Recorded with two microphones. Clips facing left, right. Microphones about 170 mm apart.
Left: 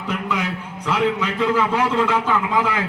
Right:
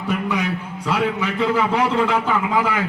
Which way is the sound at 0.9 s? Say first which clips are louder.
Left 1 dB; 15° right (ahead or behind).